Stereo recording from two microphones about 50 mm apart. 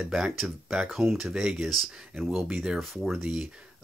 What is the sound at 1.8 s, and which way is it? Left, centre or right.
Speech, centre.